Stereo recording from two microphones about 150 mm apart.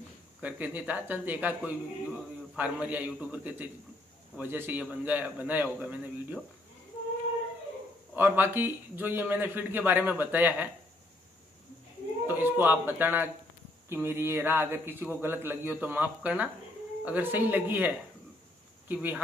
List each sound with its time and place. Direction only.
0.4 s speech: 10° right (ahead or behind)
8.1 s speech: 15° right (ahead or behind)
12.3 s speech: 15° right (ahead or behind)